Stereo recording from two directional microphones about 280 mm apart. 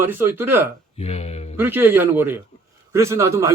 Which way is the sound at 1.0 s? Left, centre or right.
Left.